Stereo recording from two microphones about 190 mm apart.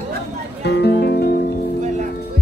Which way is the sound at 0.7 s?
60° left (ahead or behind).